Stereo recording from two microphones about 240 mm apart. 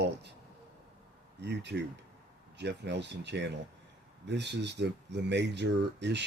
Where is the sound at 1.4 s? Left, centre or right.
Right.